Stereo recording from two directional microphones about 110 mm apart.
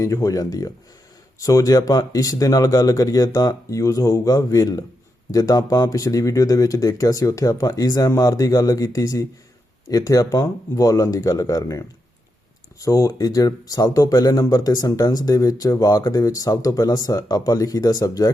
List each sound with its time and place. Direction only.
0.0 s speech: 30° left (ahead or behind)